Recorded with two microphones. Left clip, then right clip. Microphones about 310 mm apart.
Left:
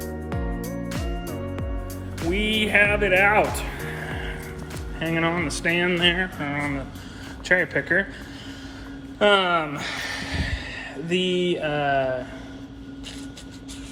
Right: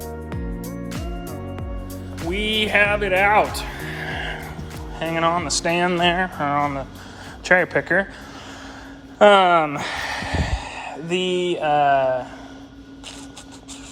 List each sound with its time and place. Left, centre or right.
0.9 s music: centre
2.3 s speech: centre
3.5 s music: centre
4.0 s music: right
4.9 s speech: centre
9.1 s speech: right